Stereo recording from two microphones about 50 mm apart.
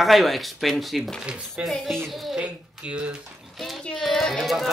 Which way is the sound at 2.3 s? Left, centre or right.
Right.